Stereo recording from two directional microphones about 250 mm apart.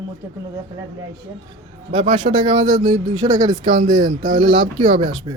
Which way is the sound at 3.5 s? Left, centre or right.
Right.